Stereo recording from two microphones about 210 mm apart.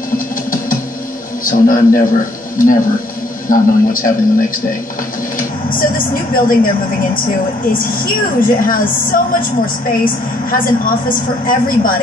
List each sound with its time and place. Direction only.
1.4 s a woman's voice: 40° left (ahead or behind)
10.5 s a woman's voice: 40° left (ahead or behind)